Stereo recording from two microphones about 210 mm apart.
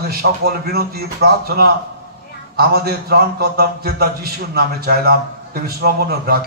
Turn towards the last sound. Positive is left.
turn(degrees=-45)  # may be behind; listen again after turning